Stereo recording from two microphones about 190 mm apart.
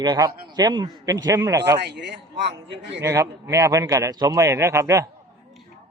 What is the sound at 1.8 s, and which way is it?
A man's voice, 65° right (ahead or behind).